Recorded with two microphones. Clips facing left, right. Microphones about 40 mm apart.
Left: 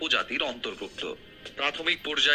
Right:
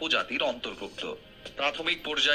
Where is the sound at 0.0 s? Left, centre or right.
Left.